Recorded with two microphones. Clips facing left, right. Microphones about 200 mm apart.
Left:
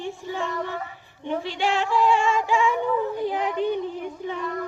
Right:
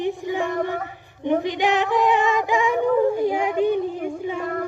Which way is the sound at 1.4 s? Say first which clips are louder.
Right 4 dB; 15° right (ahead or behind).